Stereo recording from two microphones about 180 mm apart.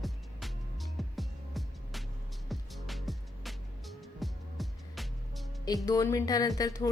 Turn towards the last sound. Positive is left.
turn(degrees=20)  # may be behind; listen again after turning